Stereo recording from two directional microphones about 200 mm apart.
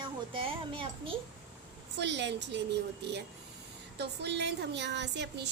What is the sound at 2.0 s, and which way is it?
A woman's voice, 60° right (ahead or behind).